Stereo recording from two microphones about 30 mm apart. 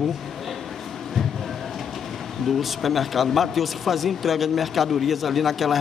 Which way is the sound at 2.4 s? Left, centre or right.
Centre.